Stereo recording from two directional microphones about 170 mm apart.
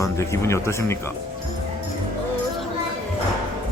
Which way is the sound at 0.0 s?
15° left (ahead or behind).